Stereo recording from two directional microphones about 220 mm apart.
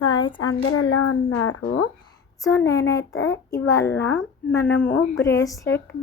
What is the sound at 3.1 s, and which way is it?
Child singing, 65° left (ahead or behind).